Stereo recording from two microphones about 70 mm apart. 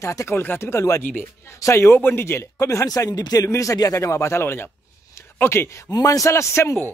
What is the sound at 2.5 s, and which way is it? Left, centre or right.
Speech, left.